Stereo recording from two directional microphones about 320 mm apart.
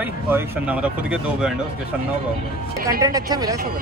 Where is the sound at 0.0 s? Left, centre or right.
Centre.